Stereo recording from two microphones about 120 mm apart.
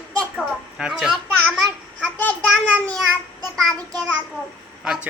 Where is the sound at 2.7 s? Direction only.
10° left (ahead or behind).